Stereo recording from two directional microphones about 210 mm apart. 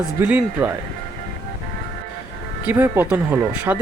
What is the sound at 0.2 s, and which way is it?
Speech, 5° right (ahead or behind).